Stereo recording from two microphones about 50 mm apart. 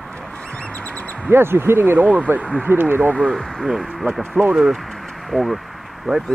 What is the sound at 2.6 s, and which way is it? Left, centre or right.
Speech, right.